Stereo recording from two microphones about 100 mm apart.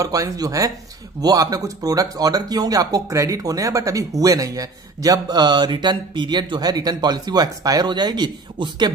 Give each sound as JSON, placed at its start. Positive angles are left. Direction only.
{"t": 0.0, "sound": "speech", "side_deg": -35}